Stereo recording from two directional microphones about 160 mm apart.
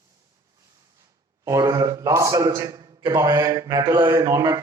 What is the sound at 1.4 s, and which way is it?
A man's voice, 20° right (ahead or behind).